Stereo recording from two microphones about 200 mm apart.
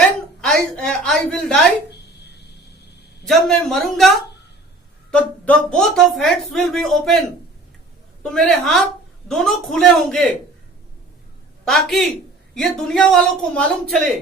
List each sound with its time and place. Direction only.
0.4 s speech: 5° left (ahead or behind)
1.9 s a sound: 55° left (ahead or behind)
3.2 s speech: centre (ahead or behind)
5.1 s speech: 5° left (ahead or behind)
8.2 s speech: 5° left (ahead or behind)
11.6 s speech: centre (ahead or behind)